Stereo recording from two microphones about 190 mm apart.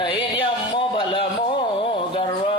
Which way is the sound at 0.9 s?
25° left (ahead or behind).